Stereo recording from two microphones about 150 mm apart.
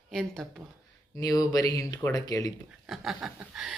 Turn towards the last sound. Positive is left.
turn(degrees=-5)  # may be behind; listen again after turning